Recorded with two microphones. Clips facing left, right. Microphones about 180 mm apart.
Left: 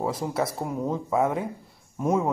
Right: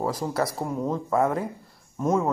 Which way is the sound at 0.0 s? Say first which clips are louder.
Right 1 dB; centre (ahead or behind).